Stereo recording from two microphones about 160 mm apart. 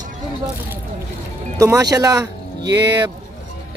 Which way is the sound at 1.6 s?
20° right (ahead or behind).